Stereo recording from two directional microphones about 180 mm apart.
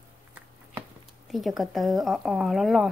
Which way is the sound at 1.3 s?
Centre (ahead or behind).